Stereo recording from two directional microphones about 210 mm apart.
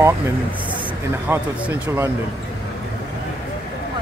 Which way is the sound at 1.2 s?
10° right (ahead or behind).